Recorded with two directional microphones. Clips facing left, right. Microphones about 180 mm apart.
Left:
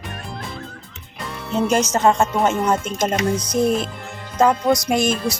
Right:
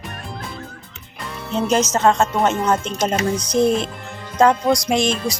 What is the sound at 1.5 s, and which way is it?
Speech, 5° left (ahead or behind).